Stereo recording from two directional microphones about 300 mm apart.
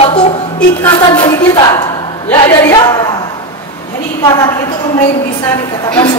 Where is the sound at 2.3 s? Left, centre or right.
Centre.